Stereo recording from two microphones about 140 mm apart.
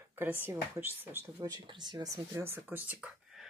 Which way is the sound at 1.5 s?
35° right (ahead or behind).